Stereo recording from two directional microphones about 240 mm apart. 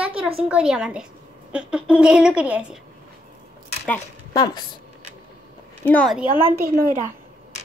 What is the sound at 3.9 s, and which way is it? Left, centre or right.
Speech, centre.